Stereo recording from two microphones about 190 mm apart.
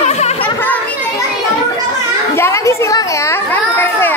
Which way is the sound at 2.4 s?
15° left (ahead or behind).